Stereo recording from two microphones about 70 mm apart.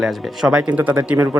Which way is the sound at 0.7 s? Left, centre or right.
Right.